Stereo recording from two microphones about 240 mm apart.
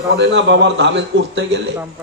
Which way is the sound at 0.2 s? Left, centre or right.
Right.